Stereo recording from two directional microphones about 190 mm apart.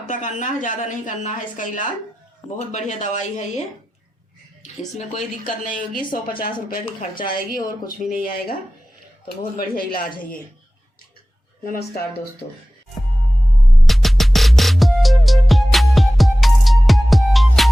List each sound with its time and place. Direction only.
0.0 s a woman's voice: 40° left (ahead or behind)
4.9 s speech: 40° left (ahead or behind)
10.2 s a woman's voice: 10° left (ahead or behind)
11.6 s speech: 50° left (ahead or behind)
13.8 s music: centre (ahead or behind)